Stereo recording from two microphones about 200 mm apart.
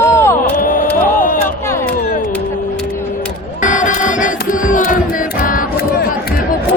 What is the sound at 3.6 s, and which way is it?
Music, 40° left (ahead or behind).